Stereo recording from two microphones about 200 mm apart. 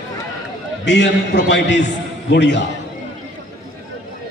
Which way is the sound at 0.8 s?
60° left (ahead or behind).